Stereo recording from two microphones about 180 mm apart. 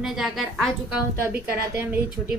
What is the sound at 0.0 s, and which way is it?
A woman's voice, centre (ahead or behind).